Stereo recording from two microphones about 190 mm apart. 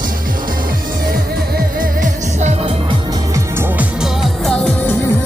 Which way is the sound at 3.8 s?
Centre (ahead or behind).